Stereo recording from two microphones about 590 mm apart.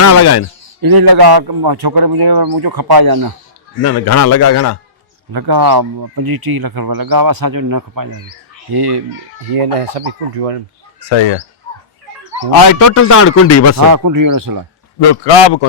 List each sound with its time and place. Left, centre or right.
0.0 s a man's voice: left
0.8 s speech: right
3.8 s a man's voice: left
5.3 s speech: right
9.6 s speech: right
11.1 s a man's voice: left
12.9 s a man's voice: left
13.8 s speech: right
14.9 s a man's voice: left